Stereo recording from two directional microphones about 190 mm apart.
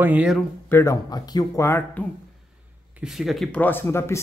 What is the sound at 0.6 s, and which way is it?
Speech, 15° left (ahead or behind).